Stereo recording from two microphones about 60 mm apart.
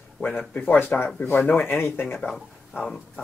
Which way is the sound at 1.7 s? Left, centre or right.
Left.